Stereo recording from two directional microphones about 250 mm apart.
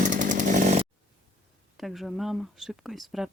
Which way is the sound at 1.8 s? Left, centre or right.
Centre.